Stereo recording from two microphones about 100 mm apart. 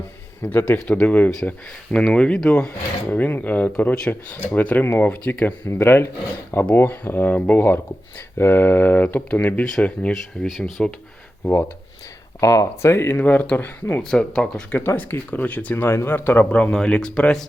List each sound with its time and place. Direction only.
0.4 s speech: 20° left (ahead or behind)
12.4 s speech: 35° left (ahead or behind)
13.1 s speech: 15° left (ahead or behind)
14.0 s speech: 5° left (ahead or behind)
14.7 s speech: 15° left (ahead or behind)